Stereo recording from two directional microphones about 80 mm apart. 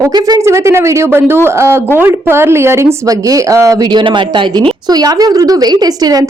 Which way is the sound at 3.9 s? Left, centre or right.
Right.